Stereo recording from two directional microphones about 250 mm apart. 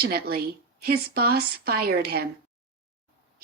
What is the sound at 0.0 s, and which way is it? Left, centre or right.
Speech, right.